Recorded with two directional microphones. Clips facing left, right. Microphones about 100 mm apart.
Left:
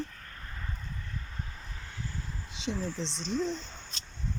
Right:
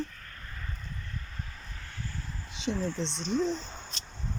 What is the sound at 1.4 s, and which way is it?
Vehicle, 20° left (ahead or behind).